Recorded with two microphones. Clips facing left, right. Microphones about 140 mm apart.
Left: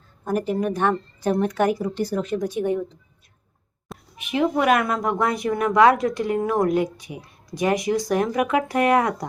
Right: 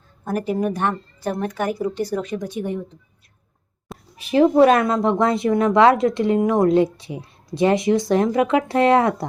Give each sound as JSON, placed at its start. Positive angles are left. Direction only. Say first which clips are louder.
{"t": 0.3, "sound": "a woman's voice", "louder": "right 1 dB", "side_deg": -5}
{"t": 4.2, "sound": "a woman's voice", "louder": "right 7 dB", "side_deg": -35}